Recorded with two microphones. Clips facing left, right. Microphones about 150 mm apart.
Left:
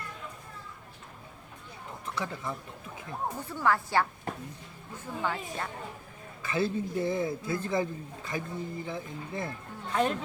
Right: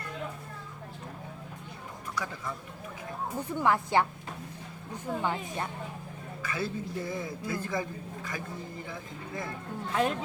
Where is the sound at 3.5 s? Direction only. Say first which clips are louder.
Right 2 dB; 20° right (ahead or behind).